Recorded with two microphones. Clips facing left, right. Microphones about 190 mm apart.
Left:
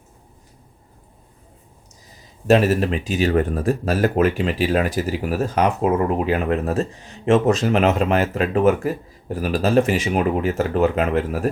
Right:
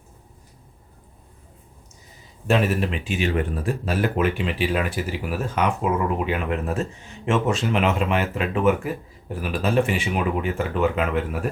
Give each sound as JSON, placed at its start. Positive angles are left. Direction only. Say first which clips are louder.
{"t": 2.5, "sound": "speech", "louder": "left 5 dB", "side_deg": 40}